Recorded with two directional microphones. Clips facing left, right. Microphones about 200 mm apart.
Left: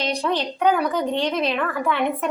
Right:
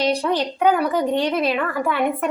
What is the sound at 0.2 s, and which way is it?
A woman's voice, 10° right (ahead or behind).